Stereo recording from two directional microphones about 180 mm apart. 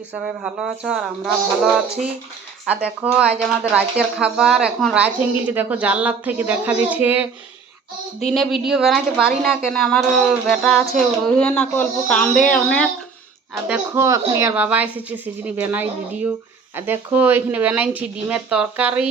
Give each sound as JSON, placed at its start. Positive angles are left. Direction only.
{"t": 0.1, "sound": "a woman's voice", "side_deg": -5}
{"t": 2.6, "sound": "speech", "side_deg": -5}
{"t": 8.3, "sound": "a woman's voice", "side_deg": 0}
{"t": 13.7, "sound": "speech", "side_deg": -10}